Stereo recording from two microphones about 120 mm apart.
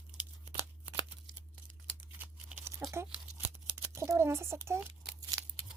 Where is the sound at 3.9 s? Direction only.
25° right (ahead or behind).